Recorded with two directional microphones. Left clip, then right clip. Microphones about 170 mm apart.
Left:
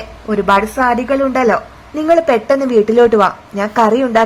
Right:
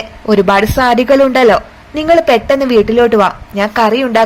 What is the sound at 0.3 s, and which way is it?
Speech, 20° right (ahead or behind).